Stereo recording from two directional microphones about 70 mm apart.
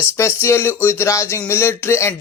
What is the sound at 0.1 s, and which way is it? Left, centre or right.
Speech, left.